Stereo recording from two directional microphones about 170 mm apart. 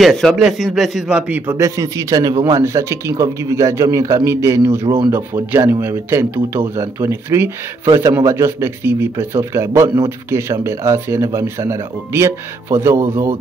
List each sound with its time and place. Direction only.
0.0 s a man's voice: centre (ahead or behind)
1.6 s speech: 20° right (ahead or behind)